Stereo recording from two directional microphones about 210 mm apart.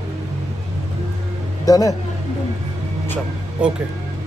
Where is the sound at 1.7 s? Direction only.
15° left (ahead or behind).